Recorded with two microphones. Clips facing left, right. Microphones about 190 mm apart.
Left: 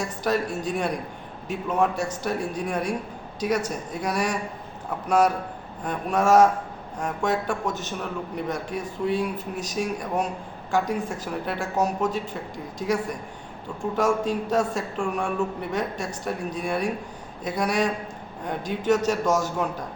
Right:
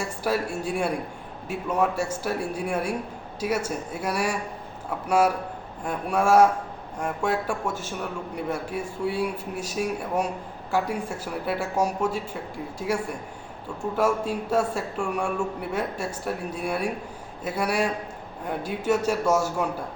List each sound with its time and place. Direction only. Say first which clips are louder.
0.0 s a man's voice: left 1 dB; 10° right (ahead or behind)
13.8 s a man's voice: left 1 dB; 5° left (ahead or behind)
14.3 s a man's voice: left 1 dB; 10° right (ahead or behind)